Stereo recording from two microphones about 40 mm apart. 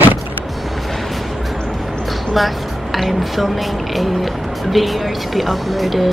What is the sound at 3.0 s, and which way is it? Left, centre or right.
Speech, centre.